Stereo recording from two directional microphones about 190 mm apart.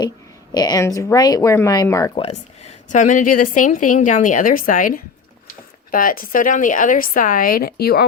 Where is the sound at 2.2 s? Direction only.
35° left (ahead or behind).